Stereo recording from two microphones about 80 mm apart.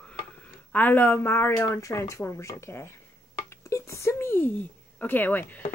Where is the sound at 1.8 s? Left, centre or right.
Left.